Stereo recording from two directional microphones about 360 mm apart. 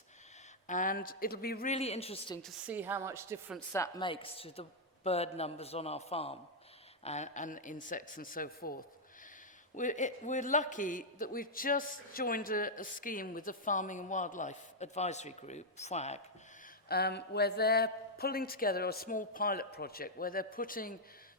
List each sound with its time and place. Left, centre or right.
0.7 s a man's voice: left
2.4 s a woman's voice: centre
3.7 s a man's voice: centre
9.7 s a man's voice: left